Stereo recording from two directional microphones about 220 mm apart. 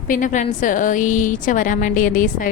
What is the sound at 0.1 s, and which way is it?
A woman's voice, 35° left (ahead or behind).